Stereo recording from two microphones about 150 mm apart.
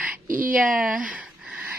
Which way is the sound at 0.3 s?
65° right (ahead or behind).